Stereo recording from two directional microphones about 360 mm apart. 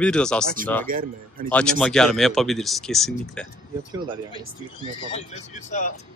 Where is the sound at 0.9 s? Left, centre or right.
Right.